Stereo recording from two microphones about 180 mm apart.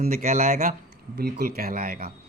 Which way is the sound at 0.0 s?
50° right (ahead or behind).